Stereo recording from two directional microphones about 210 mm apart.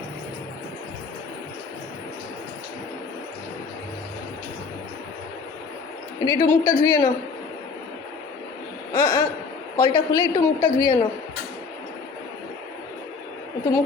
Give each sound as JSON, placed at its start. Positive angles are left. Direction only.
{"t": 6.2, "sound": "a man's voice", "side_deg": 15}
{"t": 8.9, "sound": "a sound", "side_deg": 20}
{"t": 9.8, "sound": "a woman's voice", "side_deg": 20}